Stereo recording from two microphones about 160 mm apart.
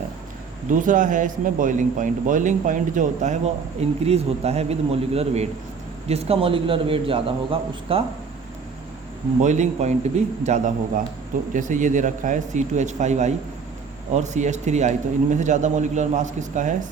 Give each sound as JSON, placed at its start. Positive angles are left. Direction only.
{"t": 0.7, "sound": "a man's voice", "side_deg": -55}
{"t": 9.4, "sound": "a man's voice", "side_deg": -50}